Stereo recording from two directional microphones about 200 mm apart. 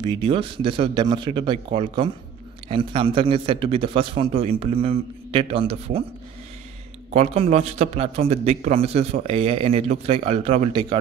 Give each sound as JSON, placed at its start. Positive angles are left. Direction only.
{"t": 0.0, "sound": "a man's voice", "side_deg": -25}
{"t": 7.2, "sound": "a man's voice", "side_deg": -30}